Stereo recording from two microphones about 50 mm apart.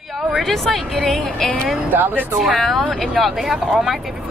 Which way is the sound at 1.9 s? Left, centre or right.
Right.